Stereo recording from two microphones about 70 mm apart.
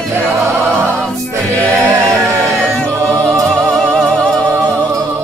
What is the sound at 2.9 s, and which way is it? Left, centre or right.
Music, right.